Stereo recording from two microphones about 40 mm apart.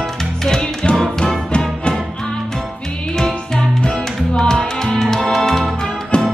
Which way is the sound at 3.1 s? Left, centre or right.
Centre.